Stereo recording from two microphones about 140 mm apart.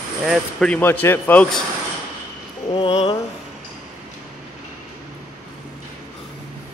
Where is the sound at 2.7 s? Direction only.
40° left (ahead or behind).